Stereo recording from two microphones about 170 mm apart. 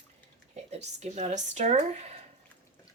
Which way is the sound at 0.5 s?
40° right (ahead or behind).